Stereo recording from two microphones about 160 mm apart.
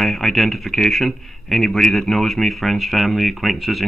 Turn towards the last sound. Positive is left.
turn(degrees=0)  # may be behind; listen again after turning